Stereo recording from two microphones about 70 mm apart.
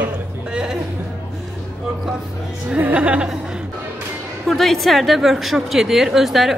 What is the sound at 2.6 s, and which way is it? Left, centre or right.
Speech, centre.